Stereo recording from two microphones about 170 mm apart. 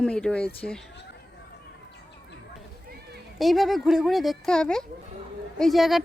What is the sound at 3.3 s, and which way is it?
A woman's voice, centre (ahead or behind).